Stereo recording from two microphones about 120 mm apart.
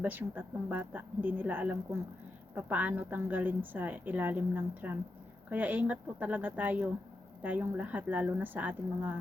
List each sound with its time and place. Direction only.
0.0 s a woman's voice: 15° right (ahead or behind)